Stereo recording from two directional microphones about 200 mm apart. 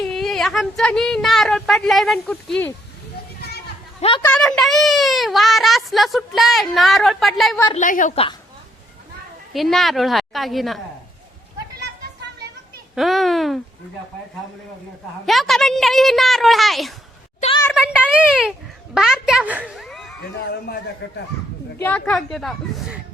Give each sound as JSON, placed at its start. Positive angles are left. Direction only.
{"t": 0.0, "sound": "speech", "side_deg": 0}
{"t": 4.0, "sound": "a woman's voice", "side_deg": 25}
{"t": 4.3, "sound": "speech", "side_deg": 5}
{"t": 7.7, "sound": "a woman's voice", "side_deg": 40}
{"t": 8.1, "sound": "a woman's voice", "side_deg": 30}
{"t": 9.5, "sound": "speech", "side_deg": 0}
{"t": 13.0, "sound": "speech", "side_deg": 0}
{"t": 15.3, "sound": "a woman's voice", "side_deg": 0}
{"t": 20.5, "sound": "a man's voice", "side_deg": 55}
{"t": 21.8, "sound": "speech", "side_deg": 5}